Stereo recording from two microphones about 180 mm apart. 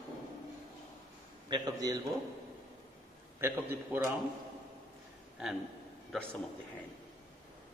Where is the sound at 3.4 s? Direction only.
10° right (ahead or behind).